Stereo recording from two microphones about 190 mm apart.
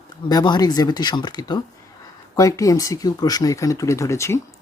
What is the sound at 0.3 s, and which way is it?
Speech, 20° left (ahead or behind).